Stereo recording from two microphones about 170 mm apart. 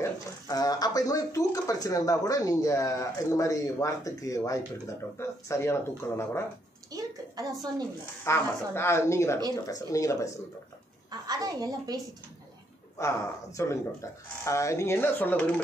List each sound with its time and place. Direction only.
0.0 s speech: 20° left (ahead or behind)
6.9 s a sound: 20° right (ahead or behind)
8.2 s speech: 15° left (ahead or behind)
11.1 s a woman's voice: 20° right (ahead or behind)
12.9 s speech: 20° left (ahead or behind)